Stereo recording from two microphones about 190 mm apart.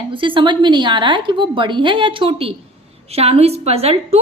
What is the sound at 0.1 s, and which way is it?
A woman's voice, 25° right (ahead or behind).